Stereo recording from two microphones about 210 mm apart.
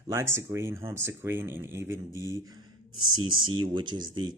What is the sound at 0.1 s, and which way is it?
Speech, 15° right (ahead or behind).